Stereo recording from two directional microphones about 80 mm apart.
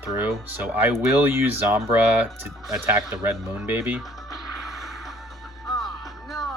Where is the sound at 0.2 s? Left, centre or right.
Right.